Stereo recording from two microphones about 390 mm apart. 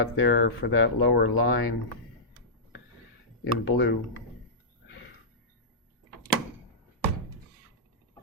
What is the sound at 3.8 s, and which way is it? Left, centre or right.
Speech, left.